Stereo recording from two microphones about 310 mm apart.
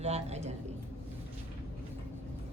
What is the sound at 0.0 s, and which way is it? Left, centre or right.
Speech, right.